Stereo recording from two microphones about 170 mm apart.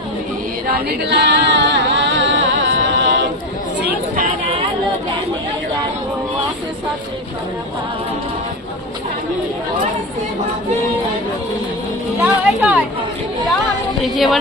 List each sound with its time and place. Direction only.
0.7 s music: 75° right (ahead or behind); by 3.2 s 90° right
3.8 s chatter: 65° right (ahead or behind)
12.2 s a sound: 10° right (ahead or behind)
14.0 s speech: centre (ahead or behind)